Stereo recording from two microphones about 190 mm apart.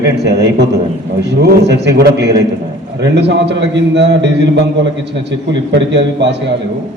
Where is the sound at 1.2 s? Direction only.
60° right (ahead or behind).